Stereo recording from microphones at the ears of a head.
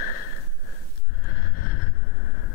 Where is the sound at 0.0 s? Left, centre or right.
Left.